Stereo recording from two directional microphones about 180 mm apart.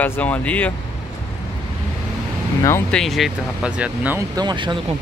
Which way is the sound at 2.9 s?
Centre (ahead or behind).